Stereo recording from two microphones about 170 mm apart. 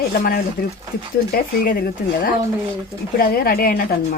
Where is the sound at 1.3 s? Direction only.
60° left (ahead or behind).